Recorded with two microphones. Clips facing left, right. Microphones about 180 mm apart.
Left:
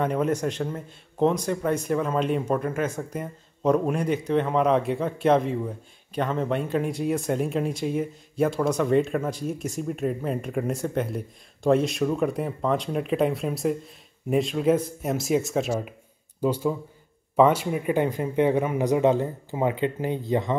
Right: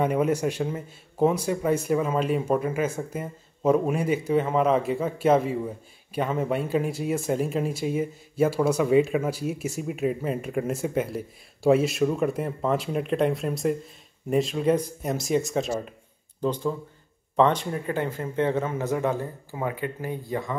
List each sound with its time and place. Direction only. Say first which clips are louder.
0.0 s speech: right 1 dB; 10° right (ahead or behind); by 20.5 s 20° left (ahead or behind)